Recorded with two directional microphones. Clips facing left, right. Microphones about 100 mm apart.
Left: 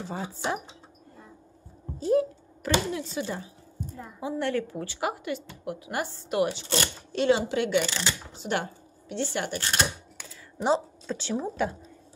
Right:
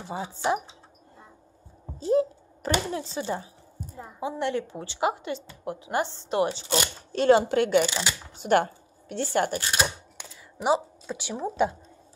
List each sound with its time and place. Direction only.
0.0 s a woman's voice: 15° right (ahead or behind)
2.0 s a sound: 25° right (ahead or behind)
2.9 s a woman's voice: 30° right (ahead or behind)
7.1 s speech: 45° right (ahead or behind)
7.8 s a woman's voice: 15° right (ahead or behind)
8.4 s speech: 50° right (ahead or behind)
9.6 s a woman's voice: 5° right (ahead or behind)